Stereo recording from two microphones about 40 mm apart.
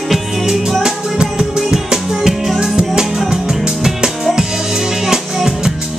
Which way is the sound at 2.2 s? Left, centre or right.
Centre.